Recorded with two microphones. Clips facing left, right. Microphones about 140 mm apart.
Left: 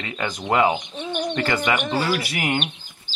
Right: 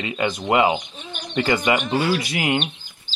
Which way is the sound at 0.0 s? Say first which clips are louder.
Right 4 dB; 15° right (ahead or behind).